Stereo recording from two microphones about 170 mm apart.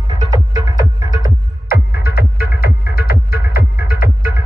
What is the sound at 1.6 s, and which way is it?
Music, 60° left (ahead or behind).